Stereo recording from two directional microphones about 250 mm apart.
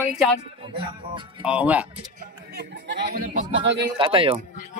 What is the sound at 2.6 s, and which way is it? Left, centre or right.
Speech, right.